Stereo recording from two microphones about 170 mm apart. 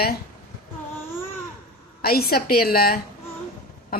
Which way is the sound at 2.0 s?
65° left (ahead or behind).